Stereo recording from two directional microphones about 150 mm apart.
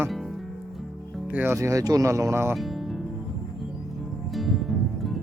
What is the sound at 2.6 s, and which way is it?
Music, centre (ahead or behind).